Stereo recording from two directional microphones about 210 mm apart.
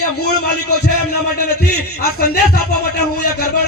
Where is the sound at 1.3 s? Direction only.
50° left (ahead or behind).